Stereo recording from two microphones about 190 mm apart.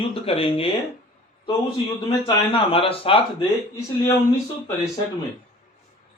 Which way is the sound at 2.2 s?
30° left (ahead or behind).